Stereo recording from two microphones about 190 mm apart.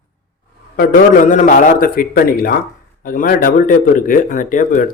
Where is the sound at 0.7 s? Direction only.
45° left (ahead or behind).